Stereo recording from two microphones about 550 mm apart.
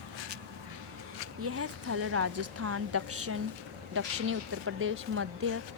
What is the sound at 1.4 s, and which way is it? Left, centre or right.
A woman's voice, right.